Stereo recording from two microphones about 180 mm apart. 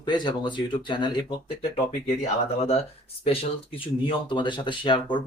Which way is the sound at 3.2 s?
35° left (ahead or behind).